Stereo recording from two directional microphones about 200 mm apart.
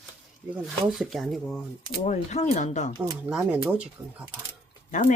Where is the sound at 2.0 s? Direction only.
35° left (ahead or behind).